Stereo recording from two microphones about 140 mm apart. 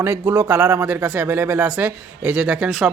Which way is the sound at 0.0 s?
15° right (ahead or behind).